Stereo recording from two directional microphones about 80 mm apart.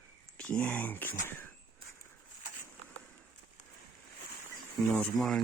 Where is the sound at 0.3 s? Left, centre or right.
Centre.